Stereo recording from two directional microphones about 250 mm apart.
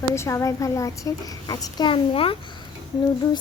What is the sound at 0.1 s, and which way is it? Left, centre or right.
A child's voice, centre.